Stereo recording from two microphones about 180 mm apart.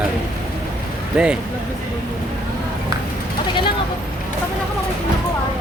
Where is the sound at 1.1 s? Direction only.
5° right (ahead or behind).